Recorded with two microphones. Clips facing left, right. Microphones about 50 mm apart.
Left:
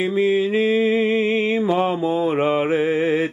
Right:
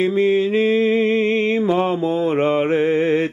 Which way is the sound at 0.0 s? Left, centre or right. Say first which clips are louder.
Right 2 dB; centre.